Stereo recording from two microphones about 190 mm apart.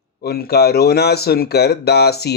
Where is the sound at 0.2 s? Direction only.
55° left (ahead or behind).